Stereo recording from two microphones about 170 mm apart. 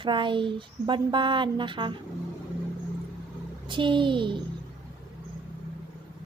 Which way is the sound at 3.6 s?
30° right (ahead or behind).